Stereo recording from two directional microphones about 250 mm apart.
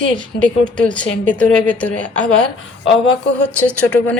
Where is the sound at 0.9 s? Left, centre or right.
Right.